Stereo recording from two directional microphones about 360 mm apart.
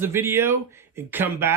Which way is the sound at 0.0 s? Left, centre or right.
Centre.